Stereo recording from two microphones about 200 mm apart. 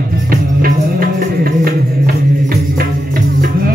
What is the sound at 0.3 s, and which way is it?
Music, 45° right (ahead or behind).